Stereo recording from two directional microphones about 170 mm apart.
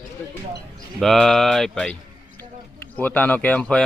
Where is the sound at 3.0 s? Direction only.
10° left (ahead or behind).